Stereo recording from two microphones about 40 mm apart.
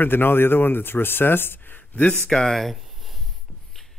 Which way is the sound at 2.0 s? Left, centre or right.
Left.